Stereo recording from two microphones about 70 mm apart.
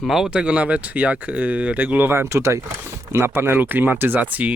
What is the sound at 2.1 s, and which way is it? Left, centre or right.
Speech, right.